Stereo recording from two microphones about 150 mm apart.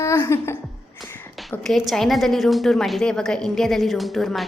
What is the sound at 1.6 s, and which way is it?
A woman's voice, centre (ahead or behind).